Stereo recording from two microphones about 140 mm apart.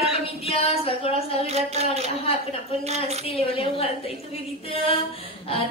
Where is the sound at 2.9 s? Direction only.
50° right (ahead or behind).